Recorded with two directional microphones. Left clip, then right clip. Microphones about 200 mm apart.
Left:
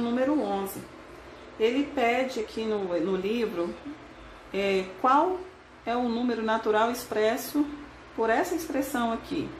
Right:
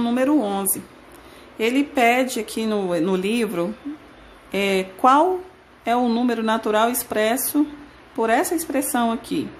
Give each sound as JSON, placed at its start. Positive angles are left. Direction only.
{"t": 0.0, "sound": "speech", "side_deg": -45}